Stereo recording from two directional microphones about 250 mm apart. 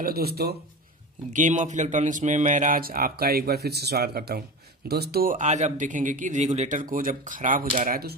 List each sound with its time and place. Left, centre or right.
0.0 s speech: right